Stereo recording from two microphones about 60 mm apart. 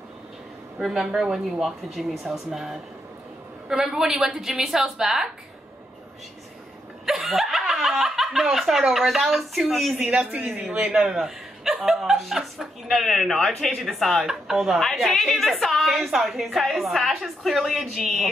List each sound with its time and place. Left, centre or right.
0.7 s a woman's voice: centre
7.1 s speech: centre
10.3 s speech: right
10.9 s speech: centre